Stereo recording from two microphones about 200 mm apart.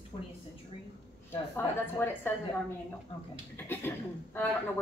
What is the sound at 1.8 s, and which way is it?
Speech, 10° left (ahead or behind).